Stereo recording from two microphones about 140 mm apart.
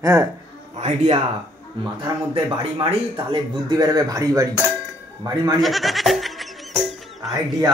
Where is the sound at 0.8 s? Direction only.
50° right (ahead or behind).